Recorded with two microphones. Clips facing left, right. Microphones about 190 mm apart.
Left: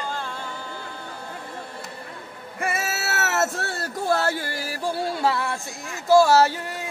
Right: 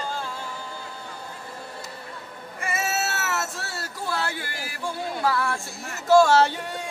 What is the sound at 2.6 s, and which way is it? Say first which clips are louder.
Cat: even; 60° left (ahead or behind).